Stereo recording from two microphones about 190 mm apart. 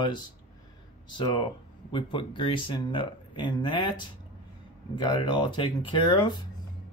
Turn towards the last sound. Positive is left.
turn(degrees=25)  # may be behind; listen again after turning